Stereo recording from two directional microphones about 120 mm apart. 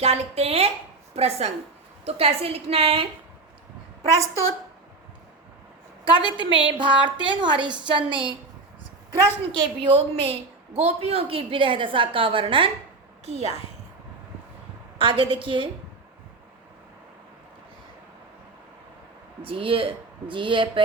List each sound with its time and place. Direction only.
0.0 s a woman's voice: 60° right (ahead or behind)
6.1 s a woman's voice: 40° right (ahead or behind)
9.6 s a woman's voice: 50° right (ahead or behind)
13.2 s speech: 65° right (ahead or behind)
14.9 s a woman's voice: 45° right (ahead or behind)
19.4 s a woman's voice: 50° right (ahead or behind)